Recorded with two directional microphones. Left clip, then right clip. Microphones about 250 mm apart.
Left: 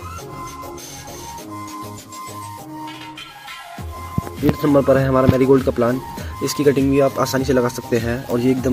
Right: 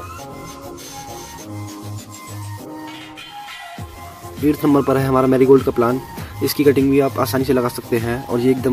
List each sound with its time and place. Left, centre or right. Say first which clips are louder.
4.6 s speech: left 3 dB; centre